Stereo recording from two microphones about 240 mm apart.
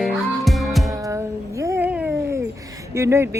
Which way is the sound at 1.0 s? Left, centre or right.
Centre.